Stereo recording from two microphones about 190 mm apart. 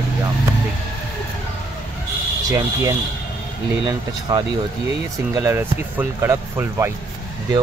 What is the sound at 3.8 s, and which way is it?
Speech, 25° right (ahead or behind).